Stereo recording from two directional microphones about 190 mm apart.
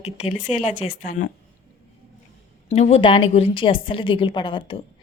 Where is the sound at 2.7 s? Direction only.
35° left (ahead or behind).